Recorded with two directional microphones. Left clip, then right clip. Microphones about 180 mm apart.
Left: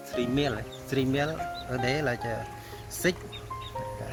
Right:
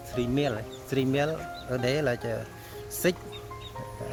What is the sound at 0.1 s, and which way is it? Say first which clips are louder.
Speech: even; 40° right (ahead or behind).